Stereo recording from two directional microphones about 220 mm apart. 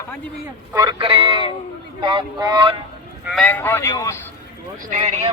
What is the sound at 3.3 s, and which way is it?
Speech, 5° left (ahead or behind).